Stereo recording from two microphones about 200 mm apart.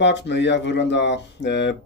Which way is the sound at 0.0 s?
60° left (ahead or behind).